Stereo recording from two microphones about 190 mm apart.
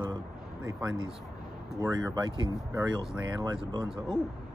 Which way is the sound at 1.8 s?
20° right (ahead or behind).